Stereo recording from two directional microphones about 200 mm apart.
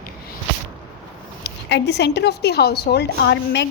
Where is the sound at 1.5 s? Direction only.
60° left (ahead or behind).